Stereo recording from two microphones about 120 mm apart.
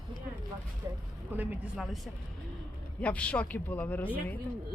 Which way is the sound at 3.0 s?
10° left (ahead or behind).